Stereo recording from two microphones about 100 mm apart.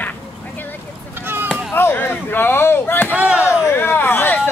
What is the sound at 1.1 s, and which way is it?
Chop, 20° right (ahead or behind).